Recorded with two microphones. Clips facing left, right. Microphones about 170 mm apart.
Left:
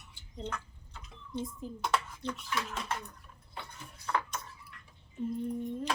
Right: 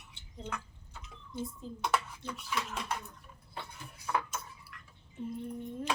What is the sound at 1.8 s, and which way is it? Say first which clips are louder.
Speech: even; 5° right (ahead or behind).